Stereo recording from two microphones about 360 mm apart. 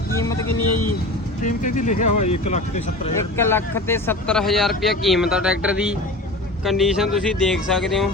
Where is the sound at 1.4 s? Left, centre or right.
Left.